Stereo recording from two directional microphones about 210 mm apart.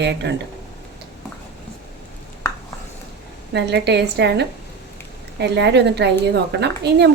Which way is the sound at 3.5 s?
55° right (ahead or behind).